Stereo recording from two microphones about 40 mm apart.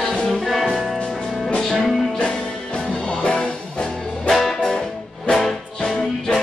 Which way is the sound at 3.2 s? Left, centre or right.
Left.